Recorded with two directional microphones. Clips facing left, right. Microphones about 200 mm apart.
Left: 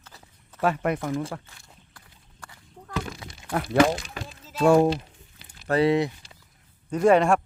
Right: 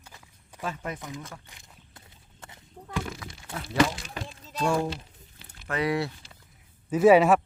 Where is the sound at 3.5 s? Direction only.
65° left (ahead or behind).